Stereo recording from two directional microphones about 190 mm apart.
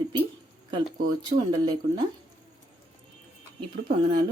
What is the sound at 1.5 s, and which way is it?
Speech, 25° right (ahead or behind).